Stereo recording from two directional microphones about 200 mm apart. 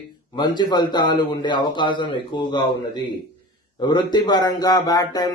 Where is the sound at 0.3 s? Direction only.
20° left (ahead or behind).